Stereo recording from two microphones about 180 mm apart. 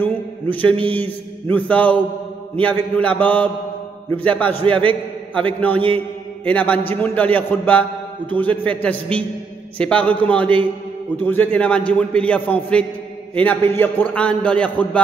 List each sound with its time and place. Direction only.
0.0 s mantra: 10° left (ahead or behind)
0.9 s a man's voice: 10° left (ahead or behind)
5.8 s mantra: 30° right (ahead or behind)
6.4 s a man's voice: 10° left (ahead or behind)